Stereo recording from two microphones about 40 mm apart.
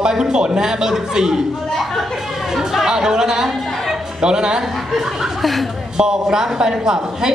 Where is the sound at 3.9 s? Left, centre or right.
Centre.